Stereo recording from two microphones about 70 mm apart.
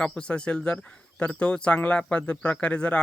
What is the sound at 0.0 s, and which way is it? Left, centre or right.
Speech, centre.